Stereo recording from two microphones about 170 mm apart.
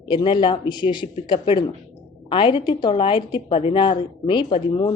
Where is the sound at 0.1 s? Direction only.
30° left (ahead or behind).